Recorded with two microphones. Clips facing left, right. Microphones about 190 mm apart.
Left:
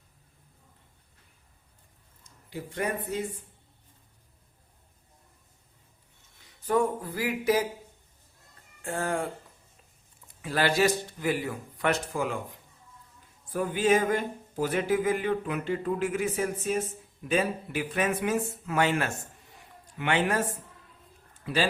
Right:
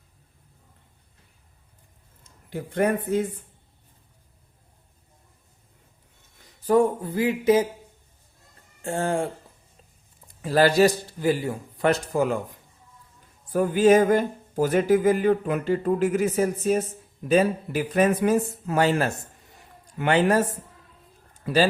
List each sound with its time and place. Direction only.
2.2 s speech: 55° right (ahead or behind)
6.7 s a sound: 30° right (ahead or behind)
8.8 s a sound: 25° right (ahead or behind)
10.4 s a man's voice: 40° right (ahead or behind)
13.5 s a man's voice: 45° right (ahead or behind)
21.4 s speech: 40° right (ahead or behind)